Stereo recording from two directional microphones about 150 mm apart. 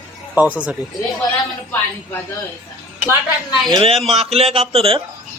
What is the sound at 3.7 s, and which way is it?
Speech, 40° right (ahead or behind).